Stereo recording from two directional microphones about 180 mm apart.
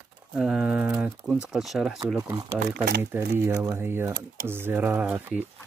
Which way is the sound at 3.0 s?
10° right (ahead or behind).